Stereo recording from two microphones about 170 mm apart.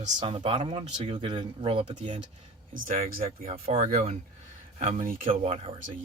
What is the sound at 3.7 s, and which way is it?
Speech, 40° right (ahead or behind).